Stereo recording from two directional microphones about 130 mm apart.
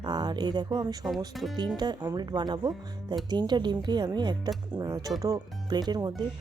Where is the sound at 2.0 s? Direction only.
30° right (ahead or behind).